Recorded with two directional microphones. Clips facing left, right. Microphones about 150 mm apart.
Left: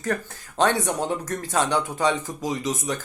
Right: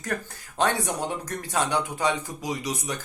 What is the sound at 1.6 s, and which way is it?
Speech, 15° right (ahead or behind).